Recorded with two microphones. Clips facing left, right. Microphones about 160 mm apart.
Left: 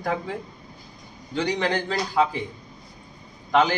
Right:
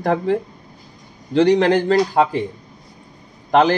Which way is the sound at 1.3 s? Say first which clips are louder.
Right 11 dB; 70° right (ahead or behind).